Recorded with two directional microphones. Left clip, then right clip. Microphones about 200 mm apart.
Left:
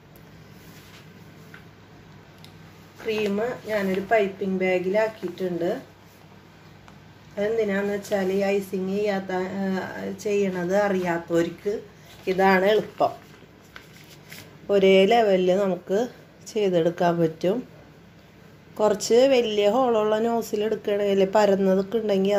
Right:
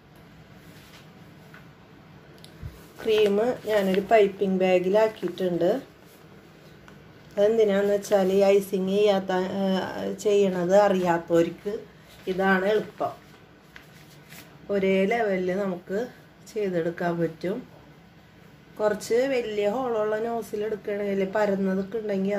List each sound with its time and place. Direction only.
3.1 s speech: 25° right (ahead or behind)
7.3 s speech: 25° right (ahead or behind)
12.3 s speech: 25° left (ahead or behind)
14.7 s speech: 30° left (ahead or behind)
18.8 s speech: 20° left (ahead or behind)